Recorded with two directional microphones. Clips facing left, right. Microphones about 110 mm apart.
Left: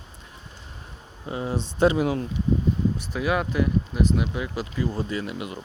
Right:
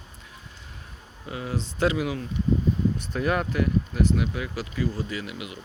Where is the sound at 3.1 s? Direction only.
10° left (ahead or behind).